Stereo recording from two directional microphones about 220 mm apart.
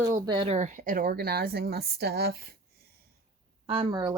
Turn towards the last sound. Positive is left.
turn(degrees=-20)  # may be behind; listen again after turning